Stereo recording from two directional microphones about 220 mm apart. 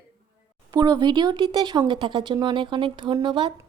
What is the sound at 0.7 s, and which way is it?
A woman's voice, 15° right (ahead or behind).